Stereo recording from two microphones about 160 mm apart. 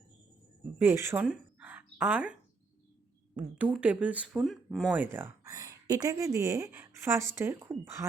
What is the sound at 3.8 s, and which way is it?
Speech, 10° right (ahead or behind).